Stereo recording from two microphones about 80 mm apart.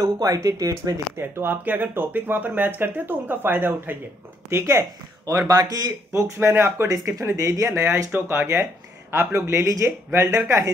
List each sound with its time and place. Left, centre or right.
0.0 s speech: right
1.1 s speech: right
4.5 s speech: right
5.5 s a man's voice: right
6.1 s speech: right
6.9 s speech: right